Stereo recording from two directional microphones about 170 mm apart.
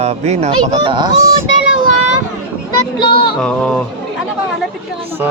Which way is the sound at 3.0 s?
25° left (ahead or behind).